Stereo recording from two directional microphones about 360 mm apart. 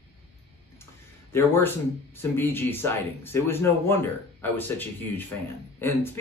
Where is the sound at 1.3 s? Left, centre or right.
Centre.